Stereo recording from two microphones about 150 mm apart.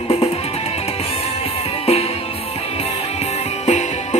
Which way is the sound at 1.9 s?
45° left (ahead or behind).